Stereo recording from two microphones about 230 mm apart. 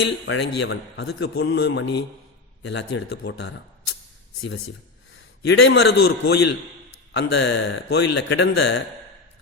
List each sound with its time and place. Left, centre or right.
0.0 s a man's voice: left
5.5 s a man's voice: left